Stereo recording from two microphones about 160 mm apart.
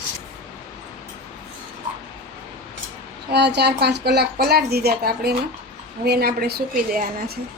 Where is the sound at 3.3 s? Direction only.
90° right; by 7.1 s 65° right (ahead or behind).